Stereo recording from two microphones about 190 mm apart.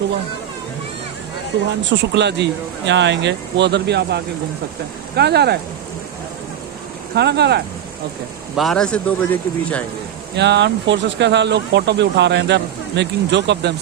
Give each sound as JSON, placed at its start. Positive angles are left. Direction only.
{"t": 1.8, "sound": "speech", "side_deg": -70}
{"t": 7.2, "sound": "speech", "side_deg": -60}
{"t": 8.5, "sound": "a man's voice", "side_deg": 0}
{"t": 10.3, "sound": "speech", "side_deg": -65}